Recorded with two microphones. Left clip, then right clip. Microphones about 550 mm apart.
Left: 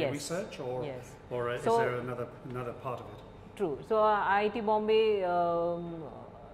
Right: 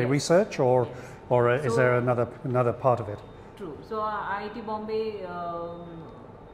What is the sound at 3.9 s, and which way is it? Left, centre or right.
A woman's voice, left.